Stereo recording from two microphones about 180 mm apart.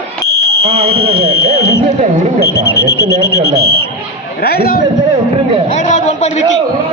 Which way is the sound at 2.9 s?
65° left (ahead or behind).